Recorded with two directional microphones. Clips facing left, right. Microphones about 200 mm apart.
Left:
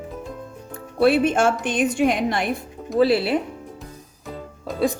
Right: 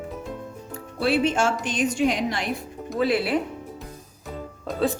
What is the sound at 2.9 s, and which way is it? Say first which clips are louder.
Speech: left 5 dB; 30° left (ahead or behind).